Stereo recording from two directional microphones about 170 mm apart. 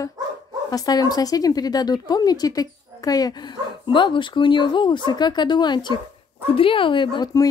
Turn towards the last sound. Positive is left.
turn(degrees=25)  # may be behind; listen again after turning